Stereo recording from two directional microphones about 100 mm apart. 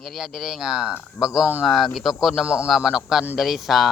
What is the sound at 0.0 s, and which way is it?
Speech, 5° right (ahead or behind).